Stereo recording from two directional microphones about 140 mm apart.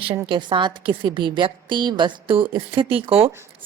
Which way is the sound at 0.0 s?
35° right (ahead or behind).